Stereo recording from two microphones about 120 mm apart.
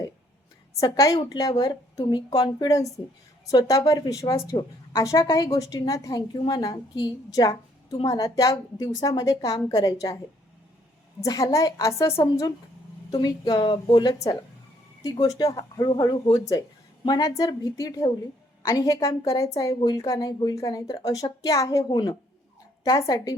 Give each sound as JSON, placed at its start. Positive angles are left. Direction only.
{"t": 0.8, "sound": "a woman's voice", "side_deg": 25}
{"t": 11.2, "sound": "a woman's voice", "side_deg": 30}
{"t": 13.1, "sound": "a woman's voice", "side_deg": 35}